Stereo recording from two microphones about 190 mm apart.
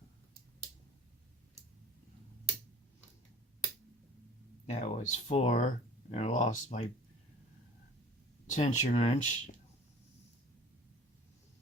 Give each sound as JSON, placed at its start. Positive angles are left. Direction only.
{"t": 4.6, "sound": "speech", "side_deg": 35}
{"t": 8.4, "sound": "speech", "side_deg": 40}